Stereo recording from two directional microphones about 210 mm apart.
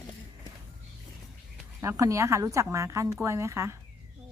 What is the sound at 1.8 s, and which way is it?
A woman's voice, 15° right (ahead or behind).